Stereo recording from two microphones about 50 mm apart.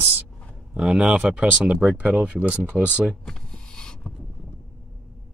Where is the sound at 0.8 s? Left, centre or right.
Right.